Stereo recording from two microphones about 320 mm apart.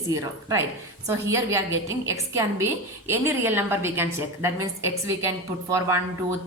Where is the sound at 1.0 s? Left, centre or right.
Centre.